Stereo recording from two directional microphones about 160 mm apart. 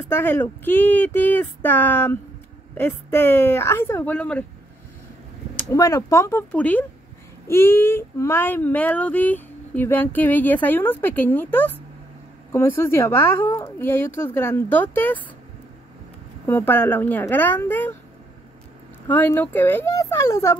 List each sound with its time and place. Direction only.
0.1 s speech: 15° left (ahead or behind)
5.7 s speech: 20° left (ahead or behind)
16.4 s speech: 10° left (ahead or behind)
19.0 s speech: 10° left (ahead or behind)